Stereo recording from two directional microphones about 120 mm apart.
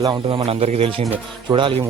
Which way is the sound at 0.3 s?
50° right (ahead or behind).